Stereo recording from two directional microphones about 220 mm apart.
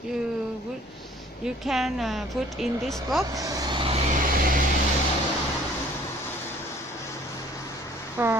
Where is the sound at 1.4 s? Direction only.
Centre (ahead or behind).